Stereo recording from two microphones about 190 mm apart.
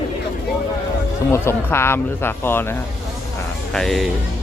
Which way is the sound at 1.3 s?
15° left (ahead or behind).